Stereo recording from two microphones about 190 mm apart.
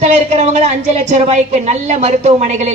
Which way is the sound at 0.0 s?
40° right (ahead or behind).